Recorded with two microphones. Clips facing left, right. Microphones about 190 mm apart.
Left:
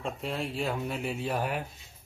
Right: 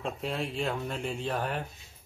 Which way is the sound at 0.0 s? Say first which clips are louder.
Even; centre (ahead or behind).